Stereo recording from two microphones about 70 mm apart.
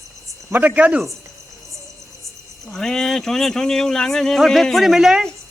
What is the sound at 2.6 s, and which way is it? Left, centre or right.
Speech, centre.